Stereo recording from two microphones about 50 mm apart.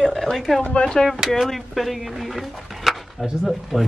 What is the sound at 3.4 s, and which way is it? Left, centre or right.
Speech, centre.